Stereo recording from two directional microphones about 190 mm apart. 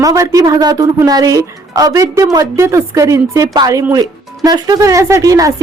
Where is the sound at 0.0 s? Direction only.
15° right (ahead or behind).